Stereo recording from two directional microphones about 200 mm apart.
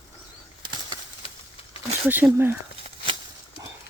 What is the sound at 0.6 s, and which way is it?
Bird flight, 25° right (ahead or behind).